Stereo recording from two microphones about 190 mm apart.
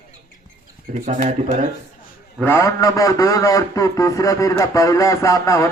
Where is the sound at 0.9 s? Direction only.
45° right (ahead or behind).